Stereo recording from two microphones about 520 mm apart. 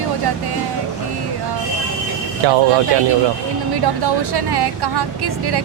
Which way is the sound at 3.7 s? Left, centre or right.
Right.